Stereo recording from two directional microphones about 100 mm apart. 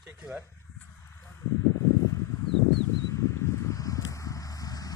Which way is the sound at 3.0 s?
30° left (ahead or behind).